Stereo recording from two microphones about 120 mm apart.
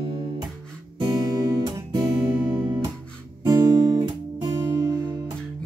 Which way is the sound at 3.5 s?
35° right (ahead or behind).